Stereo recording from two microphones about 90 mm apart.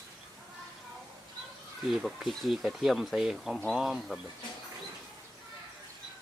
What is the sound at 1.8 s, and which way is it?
Speech, centre (ahead or behind).